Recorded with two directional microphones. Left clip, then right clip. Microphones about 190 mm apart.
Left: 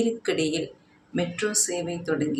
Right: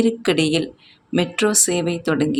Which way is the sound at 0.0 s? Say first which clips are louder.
Right 6 dB; 50° right (ahead or behind).